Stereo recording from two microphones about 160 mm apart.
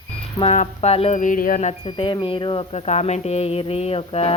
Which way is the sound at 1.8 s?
30° left (ahead or behind).